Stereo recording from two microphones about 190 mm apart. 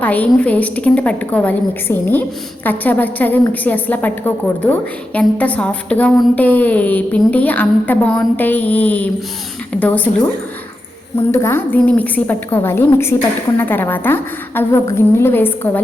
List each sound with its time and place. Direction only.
0.0 s a woman's voice: 10° left (ahead or behind)
11.3 s a woman's voice: 15° left (ahead or behind)